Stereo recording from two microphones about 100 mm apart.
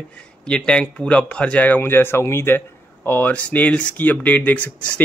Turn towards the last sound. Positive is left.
turn(degrees=15)  # may be behind; listen again after turning